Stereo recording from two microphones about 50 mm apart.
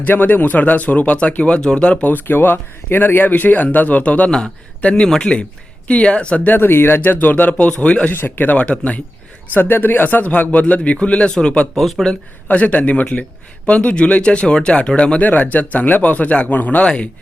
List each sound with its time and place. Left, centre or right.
0.0 s speech: left
2.0 s speech: left
6.4 s speech: left
7.6 s speech: left
8.1 s speech: left
9.5 s speech: left
11.8 s speech: centre
12.5 s speech: left
15.2 s speech: left
16.8 s speech: left